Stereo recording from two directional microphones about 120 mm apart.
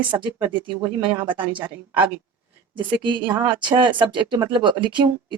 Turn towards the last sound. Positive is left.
turn(degrees=-40)  # may be behind; listen again after turning